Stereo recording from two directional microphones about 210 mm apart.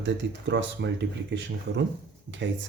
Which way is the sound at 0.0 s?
55° right (ahead or behind).